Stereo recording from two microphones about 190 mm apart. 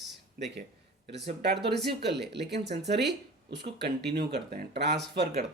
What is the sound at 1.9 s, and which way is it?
Speech, 60° right (ahead or behind).